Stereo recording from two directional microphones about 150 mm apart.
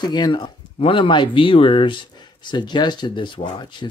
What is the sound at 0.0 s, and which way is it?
Speech, 30° left (ahead or behind).